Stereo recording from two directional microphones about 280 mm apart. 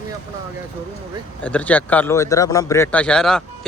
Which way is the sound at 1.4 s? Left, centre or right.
Centre.